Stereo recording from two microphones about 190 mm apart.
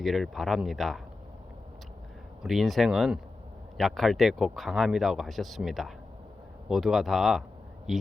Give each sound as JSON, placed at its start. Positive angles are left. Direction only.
{"t": 0.0, "sound": "speech", "side_deg": 0}
{"t": 2.4, "sound": "speech", "side_deg": 0}